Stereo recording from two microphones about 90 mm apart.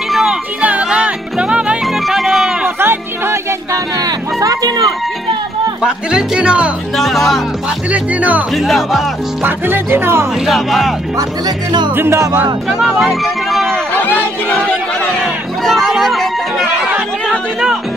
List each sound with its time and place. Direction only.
0.1 s music: 5° right (ahead or behind)
0.6 s music: 15° right (ahead or behind)
2.6 s music: 25° right (ahead or behind)
4.0 s a sound: 40° right (ahead or behind)
5.8 s speech: 10° right (ahead or behind)
7.0 s speech: centre (ahead or behind)
7.9 s speech: 15° right (ahead or behind)
8.5 s speech: centre (ahead or behind)
9.4 s music: 25° right (ahead or behind)
10.4 s speech: centre (ahead or behind)
11.1 s speech: 50° right (ahead or behind)
11.9 s music: 25° right (ahead or behind)
12.6 s speech: 5° right (ahead or behind)
15.6 s speech: centre (ahead or behind)